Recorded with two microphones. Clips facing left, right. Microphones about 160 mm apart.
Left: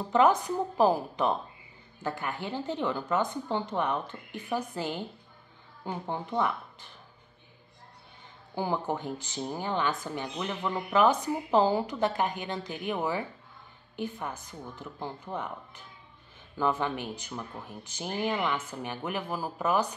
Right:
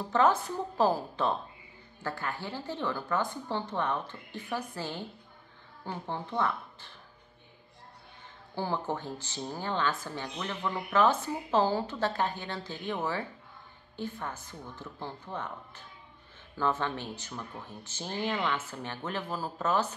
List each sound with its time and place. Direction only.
0.1 s speech: 15° left (ahead or behind)
8.5 s speech: 15° left (ahead or behind)